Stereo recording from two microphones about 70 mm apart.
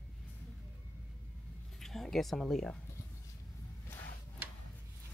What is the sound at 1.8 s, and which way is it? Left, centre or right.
Speech, centre.